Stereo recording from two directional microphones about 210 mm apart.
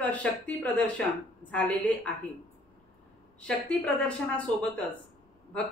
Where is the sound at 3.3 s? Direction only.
5° left (ahead or behind).